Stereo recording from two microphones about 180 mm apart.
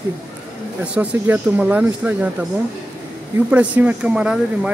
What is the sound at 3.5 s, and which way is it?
Speech, 10° right (ahead or behind).